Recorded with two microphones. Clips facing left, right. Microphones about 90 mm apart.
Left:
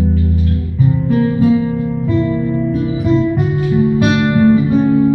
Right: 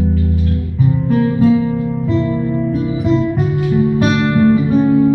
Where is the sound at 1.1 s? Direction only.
20° left (ahead or behind).